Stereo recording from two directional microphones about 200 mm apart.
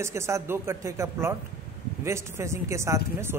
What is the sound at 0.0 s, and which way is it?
Speech, 15° right (ahead or behind).